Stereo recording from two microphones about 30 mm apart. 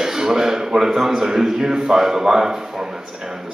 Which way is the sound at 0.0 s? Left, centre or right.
Centre.